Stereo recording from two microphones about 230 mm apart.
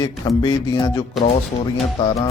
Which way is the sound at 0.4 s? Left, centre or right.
Centre.